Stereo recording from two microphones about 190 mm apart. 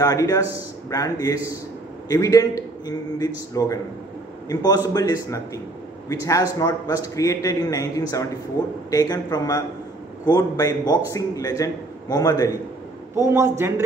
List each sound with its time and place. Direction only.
0.0 s a man's voice: 15° left (ahead or behind)
8.9 s a man's voice: 20° left (ahead or behind)
13.1 s a man's voice: 15° right (ahead or behind)